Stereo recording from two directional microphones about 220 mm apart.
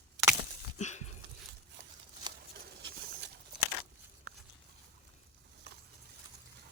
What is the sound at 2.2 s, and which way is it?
Patter, 20° right (ahead or behind).